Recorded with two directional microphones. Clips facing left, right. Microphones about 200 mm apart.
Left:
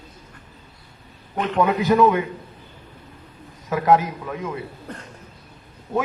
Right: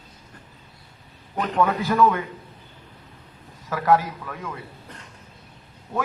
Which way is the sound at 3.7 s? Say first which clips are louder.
Left 2 dB; 20° left (ahead or behind).